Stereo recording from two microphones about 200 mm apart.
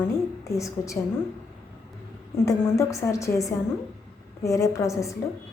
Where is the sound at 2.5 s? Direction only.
15° left (ahead or behind).